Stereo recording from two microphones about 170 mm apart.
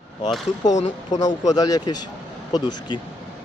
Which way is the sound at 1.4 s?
20° left (ahead or behind).